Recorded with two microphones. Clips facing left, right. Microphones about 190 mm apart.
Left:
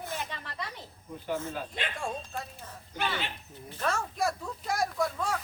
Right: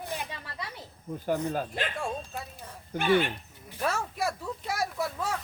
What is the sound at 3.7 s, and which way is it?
Speech, 10° right (ahead or behind).